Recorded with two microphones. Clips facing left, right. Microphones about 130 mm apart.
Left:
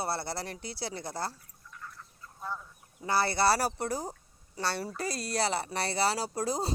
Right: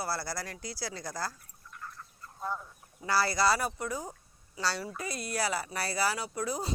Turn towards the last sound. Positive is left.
turn(degrees=35)  # may be behind; listen again after turning